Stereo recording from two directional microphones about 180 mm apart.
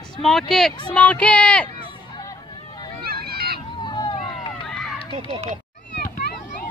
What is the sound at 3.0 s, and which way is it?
Run, 60° right (ahead or behind).